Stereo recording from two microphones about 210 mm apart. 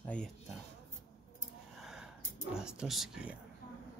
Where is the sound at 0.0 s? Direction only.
5° left (ahead or behind).